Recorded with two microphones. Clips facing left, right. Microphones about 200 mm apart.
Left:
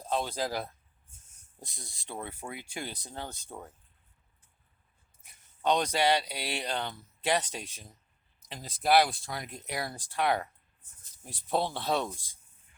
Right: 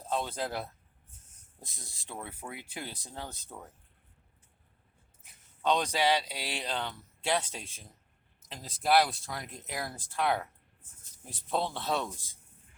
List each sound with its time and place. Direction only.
0.0 s speech: centre (ahead or behind)
3.2 s speech: 30° left (ahead or behind)
5.8 s speech: 5° right (ahead or behind)
11.5 s speech: centre (ahead or behind)